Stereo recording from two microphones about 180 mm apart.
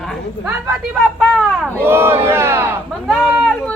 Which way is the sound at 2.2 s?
15° right (ahead or behind).